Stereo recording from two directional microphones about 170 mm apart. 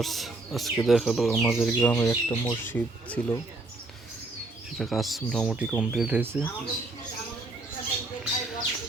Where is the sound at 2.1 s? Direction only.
30° left (ahead or behind).